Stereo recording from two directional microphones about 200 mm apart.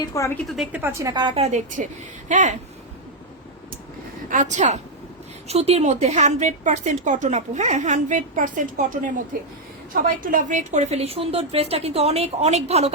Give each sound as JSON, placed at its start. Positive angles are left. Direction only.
{"t": 0.0, "sound": "a woman's voice", "side_deg": 15}
{"t": 0.5, "sound": "a woman's voice", "side_deg": -5}
{"t": 4.3, "sound": "speech", "side_deg": -40}